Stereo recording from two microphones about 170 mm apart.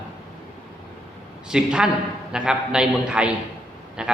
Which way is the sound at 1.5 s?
5° right (ahead or behind).